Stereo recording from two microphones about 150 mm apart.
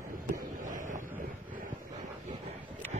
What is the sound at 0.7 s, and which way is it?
Wind noise, 60° right (ahead or behind).